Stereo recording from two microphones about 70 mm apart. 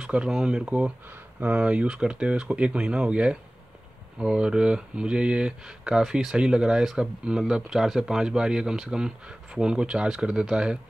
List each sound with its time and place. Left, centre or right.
0.0 s speech: centre
1.0 s speech: right